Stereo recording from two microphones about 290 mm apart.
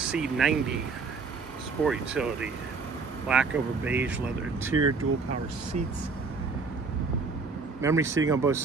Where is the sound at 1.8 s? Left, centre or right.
Centre.